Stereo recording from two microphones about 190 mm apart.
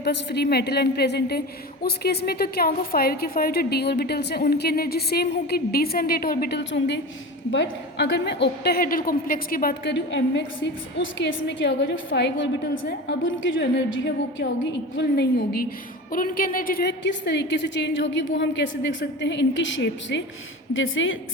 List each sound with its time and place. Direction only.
0.0 s a woman's voice: 60° left (ahead or behind)
13.1 s a woman's voice: 80° left; by 15.6 s 60° left (ahead or behind)
16.1 s a woman's voice: 45° left (ahead or behind); by 20.2 s 70° left (ahead or behind)
20.7 s a woman's voice: 90° left